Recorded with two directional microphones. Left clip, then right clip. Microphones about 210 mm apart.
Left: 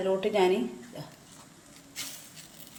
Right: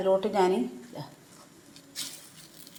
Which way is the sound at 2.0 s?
15° right (ahead or behind).